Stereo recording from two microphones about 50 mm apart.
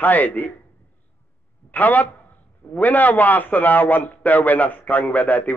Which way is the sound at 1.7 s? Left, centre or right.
Left.